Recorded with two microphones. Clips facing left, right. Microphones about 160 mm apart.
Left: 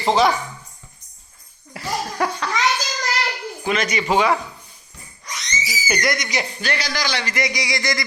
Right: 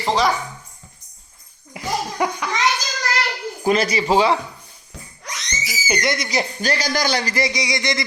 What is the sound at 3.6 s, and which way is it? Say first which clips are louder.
Speech: right 4 dB; 35° right (ahead or behind).